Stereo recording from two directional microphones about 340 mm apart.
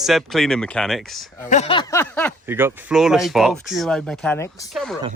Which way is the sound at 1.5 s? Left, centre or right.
Centre.